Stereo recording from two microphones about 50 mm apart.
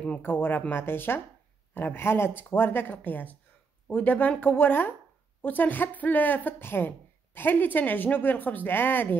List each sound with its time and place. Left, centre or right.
0.2 s speech: left